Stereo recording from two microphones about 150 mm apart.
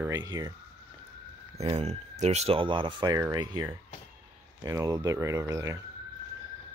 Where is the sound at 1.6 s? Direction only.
40° right (ahead or behind); by 3.6 s 25° right (ahead or behind).